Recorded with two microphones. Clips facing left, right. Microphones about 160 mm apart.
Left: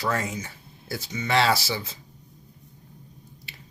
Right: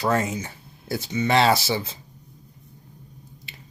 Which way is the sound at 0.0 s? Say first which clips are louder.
Right 5 dB; 25° right (ahead or behind).